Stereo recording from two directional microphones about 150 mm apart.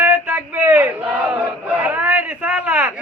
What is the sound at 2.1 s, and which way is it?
Speech, 10° right (ahead or behind).